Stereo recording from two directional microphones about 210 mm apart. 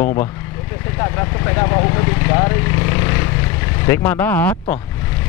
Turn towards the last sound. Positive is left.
turn(degrees=15)  # may be behind; listen again after turning